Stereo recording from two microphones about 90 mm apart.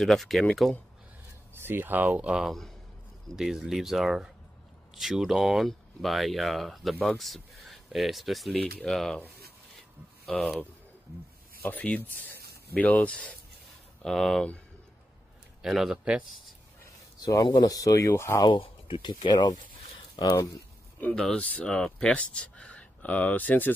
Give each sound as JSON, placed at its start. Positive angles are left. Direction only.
{"t": 0.0, "sound": "speech", "side_deg": 0}
{"t": 1.5, "sound": "speech", "side_deg": -25}
{"t": 10.3, "sound": "speech", "side_deg": 10}
{"t": 11.7, "sound": "speech", "side_deg": 15}
{"t": 14.0, "sound": "speech", "side_deg": 5}
{"t": 15.6, "sound": "speech", "side_deg": -5}
{"t": 17.2, "sound": "speech", "side_deg": 40}
{"t": 18.4, "sound": "speech", "side_deg": 65}
{"t": 20.2, "sound": "speech", "side_deg": 45}
{"t": 21.1, "sound": "speech", "side_deg": 5}